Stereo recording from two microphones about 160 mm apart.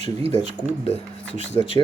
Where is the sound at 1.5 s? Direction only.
25° left (ahead or behind).